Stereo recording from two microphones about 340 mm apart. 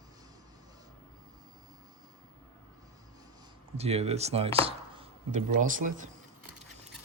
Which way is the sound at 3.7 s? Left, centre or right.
Centre.